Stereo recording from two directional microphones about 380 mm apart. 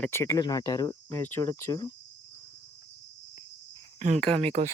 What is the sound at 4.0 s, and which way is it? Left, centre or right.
Speech, centre.